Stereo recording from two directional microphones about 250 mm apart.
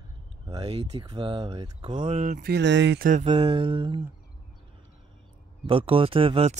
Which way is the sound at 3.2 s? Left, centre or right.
Centre.